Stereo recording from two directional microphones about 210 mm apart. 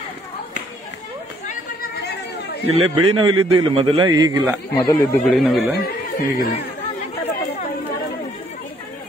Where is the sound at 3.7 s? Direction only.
25° right (ahead or behind).